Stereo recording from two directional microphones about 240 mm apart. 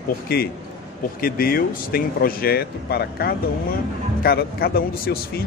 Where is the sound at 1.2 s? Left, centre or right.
Left.